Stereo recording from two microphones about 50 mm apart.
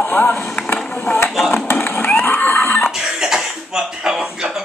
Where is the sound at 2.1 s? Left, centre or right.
Left.